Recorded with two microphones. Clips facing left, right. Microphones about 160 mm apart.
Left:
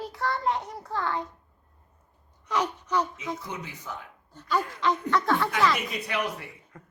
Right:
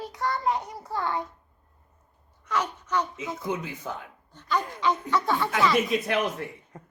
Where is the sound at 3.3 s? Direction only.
55° right (ahead or behind).